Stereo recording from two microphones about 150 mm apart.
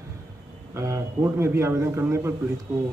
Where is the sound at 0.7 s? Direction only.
20° right (ahead or behind).